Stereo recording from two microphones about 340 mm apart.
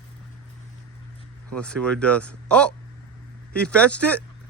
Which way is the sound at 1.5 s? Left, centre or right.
Centre.